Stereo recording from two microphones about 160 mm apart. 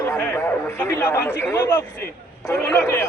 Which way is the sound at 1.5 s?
15° left (ahead or behind).